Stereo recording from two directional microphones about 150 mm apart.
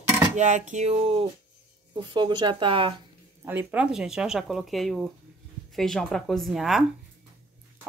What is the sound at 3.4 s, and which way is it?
Speech, 10° right (ahead or behind).